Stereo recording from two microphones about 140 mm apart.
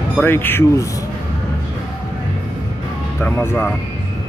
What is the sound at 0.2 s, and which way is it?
Speech, 15° left (ahead or behind).